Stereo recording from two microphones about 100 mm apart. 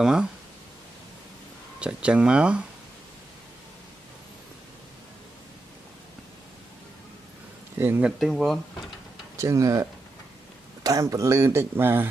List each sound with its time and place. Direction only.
0.0 s speech: 5° right (ahead or behind)
1.8 s speech: 10° right (ahead or behind)
8.0 s speech: 5° right (ahead or behind)
9.4 s speech: 30° right (ahead or behind)